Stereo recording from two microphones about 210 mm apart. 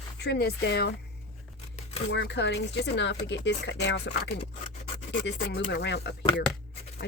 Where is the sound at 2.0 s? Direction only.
60° left (ahead or behind).